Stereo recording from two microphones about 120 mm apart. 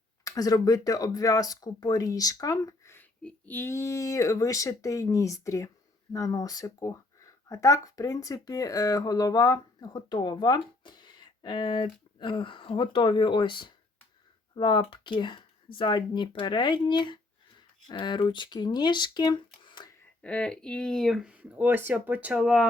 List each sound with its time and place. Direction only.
0.3 s speech: 30° left (ahead or behind)
20.2 s speech: 10° left (ahead or behind)